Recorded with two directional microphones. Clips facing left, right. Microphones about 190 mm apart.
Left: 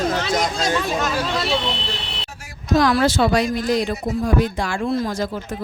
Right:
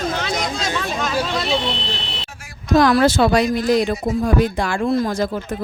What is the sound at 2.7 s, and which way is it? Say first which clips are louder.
Speech: right 3 dB; 55° right (ahead or behind).